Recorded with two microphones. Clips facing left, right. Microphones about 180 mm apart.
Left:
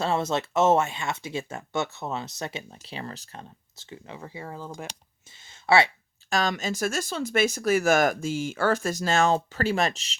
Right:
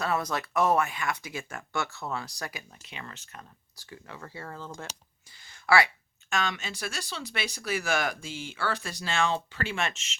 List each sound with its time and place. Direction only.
0.0 s speech: 25° left (ahead or behind)
3.8 s speech: 20° left (ahead or behind)
5.3 s a sound: 25° left (ahead or behind)
6.3 s speech: 40° left (ahead or behind)